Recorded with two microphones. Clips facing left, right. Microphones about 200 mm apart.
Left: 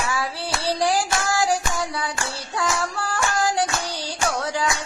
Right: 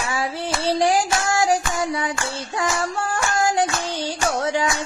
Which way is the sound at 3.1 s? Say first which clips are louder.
Right 1 dB; 20° right (ahead or behind).